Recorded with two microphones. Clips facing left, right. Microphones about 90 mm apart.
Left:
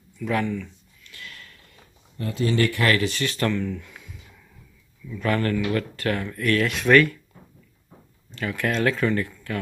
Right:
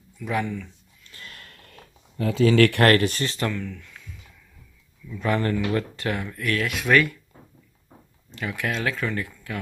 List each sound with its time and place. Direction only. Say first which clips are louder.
0.2 s speech: left 2 dB; 10° right (ahead or behind)
1.1 s a sound: left 1 dB; 40° right (ahead or behind)
1.7 s speech: right 4 dB; 90° right; by 3.2 s 55° right (ahead or behind)
3.5 s speech: left 5 dB; 10° left (ahead or behind)
5.2 s speech: even; 15° right (ahead or behind)
6.1 s speech: left 5 dB; 5° right (ahead or behind)
8.4 s speech: left 3 dB; 10° right (ahead or behind)